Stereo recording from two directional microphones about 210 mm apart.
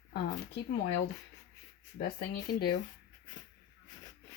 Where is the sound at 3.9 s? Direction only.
15° left (ahead or behind).